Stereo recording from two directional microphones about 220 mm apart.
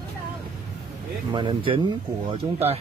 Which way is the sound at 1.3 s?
20° right (ahead or behind).